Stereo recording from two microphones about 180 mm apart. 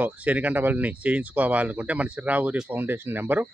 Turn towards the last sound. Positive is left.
turn(degrees=-10)  # may be behind; listen again after turning